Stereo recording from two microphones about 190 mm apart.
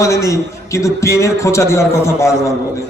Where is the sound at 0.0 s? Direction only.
15° left (ahead or behind).